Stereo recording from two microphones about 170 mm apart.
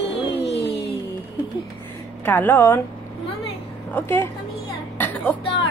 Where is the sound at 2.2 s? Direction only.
10° left (ahead or behind).